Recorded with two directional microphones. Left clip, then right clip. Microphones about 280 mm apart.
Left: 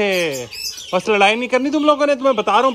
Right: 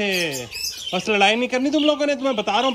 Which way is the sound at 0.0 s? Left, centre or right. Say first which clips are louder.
Left 5 dB; centre.